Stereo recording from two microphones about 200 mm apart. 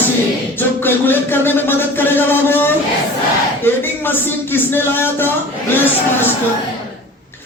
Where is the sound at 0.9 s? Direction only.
10° left (ahead or behind).